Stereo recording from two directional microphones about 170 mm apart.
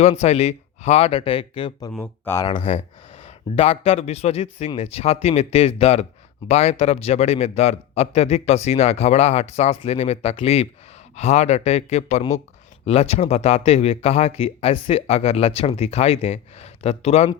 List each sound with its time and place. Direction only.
0.0 s speech: 40° left (ahead or behind)
1.9 s speech: 10° left (ahead or behind)
2.5 s speech: 35° left (ahead or behind)